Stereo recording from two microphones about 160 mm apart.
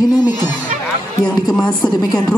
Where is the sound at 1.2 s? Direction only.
5° left (ahead or behind).